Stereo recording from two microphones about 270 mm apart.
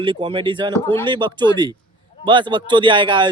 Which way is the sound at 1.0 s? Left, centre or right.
Centre.